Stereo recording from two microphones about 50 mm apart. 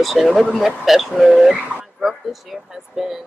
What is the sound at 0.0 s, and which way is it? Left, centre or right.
A woman's voice, centre.